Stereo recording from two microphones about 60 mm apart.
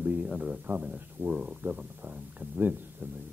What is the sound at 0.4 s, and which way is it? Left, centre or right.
Speech, right.